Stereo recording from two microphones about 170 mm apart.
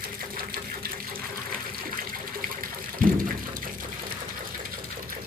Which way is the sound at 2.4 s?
55° right (ahead or behind).